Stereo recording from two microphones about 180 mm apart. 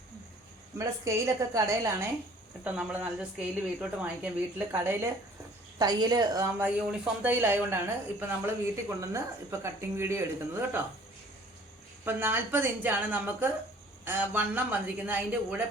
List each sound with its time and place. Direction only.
0.8 s speech: 15° right (ahead or behind)
2.7 s speech: 5° right (ahead or behind)
5.8 s speech: 25° right (ahead or behind)
12.0 s speech: 10° right (ahead or behind)